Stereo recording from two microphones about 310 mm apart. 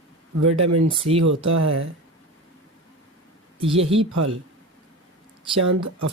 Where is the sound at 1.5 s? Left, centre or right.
Right.